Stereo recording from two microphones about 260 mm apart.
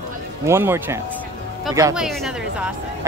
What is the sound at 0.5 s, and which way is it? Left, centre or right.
A woman's voice, centre.